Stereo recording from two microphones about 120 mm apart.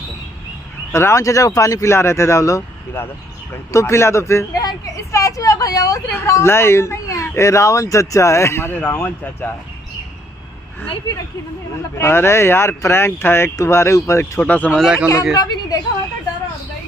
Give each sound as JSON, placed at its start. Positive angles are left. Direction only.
{"t": 0.9, "sound": "speech", "side_deg": 25}
{"t": 12.0, "sound": "speech", "side_deg": 20}
{"t": 14.4, "sound": "speech", "side_deg": 10}
{"t": 14.8, "sound": "a man's voice", "side_deg": -10}
{"t": 15.3, "sound": "a woman's voice", "side_deg": 35}